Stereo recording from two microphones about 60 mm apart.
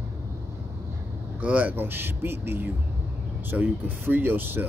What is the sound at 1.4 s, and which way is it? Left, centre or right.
Speech, right.